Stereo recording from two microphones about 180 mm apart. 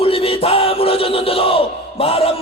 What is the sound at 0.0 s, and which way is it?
Music, 30° left (ahead or behind).